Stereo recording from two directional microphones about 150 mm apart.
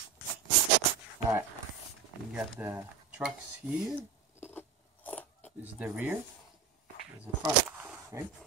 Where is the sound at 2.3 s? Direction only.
10° right (ahead or behind).